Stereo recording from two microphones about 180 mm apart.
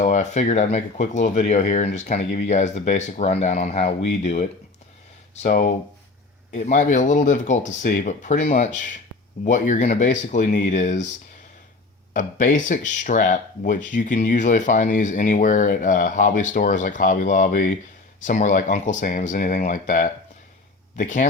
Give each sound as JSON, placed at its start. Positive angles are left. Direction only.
{"t": 0.0, "sound": "speech", "side_deg": 40}
{"t": 12.1, "sound": "speech", "side_deg": 45}